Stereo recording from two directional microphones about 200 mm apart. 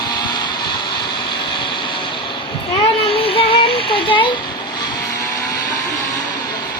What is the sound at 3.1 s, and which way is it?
Music, 25° left (ahead or behind).